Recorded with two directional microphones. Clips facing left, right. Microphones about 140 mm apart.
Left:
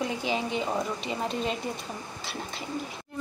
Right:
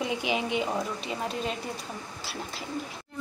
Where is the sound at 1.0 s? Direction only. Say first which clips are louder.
Left 2 dB; centre (ahead or behind).